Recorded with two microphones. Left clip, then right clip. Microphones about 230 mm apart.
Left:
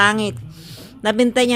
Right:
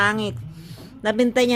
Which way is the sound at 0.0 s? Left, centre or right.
Left.